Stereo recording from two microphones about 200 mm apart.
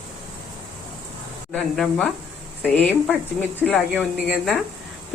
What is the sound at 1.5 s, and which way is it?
Speech, 5° left (ahead or behind).